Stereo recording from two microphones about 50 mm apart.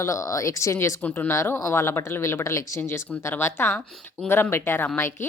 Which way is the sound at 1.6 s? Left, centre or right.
Left.